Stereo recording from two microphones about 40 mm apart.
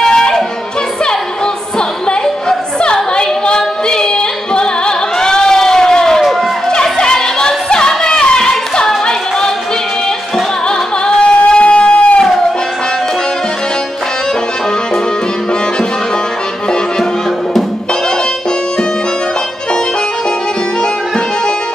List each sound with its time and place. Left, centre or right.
0.0 s music: centre
1.8 s music: centre
11.1 s a sound: left